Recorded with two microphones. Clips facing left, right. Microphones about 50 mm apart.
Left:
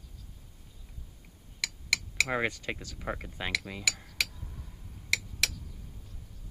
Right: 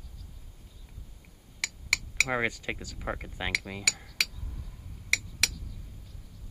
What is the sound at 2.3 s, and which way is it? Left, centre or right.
Speech, centre.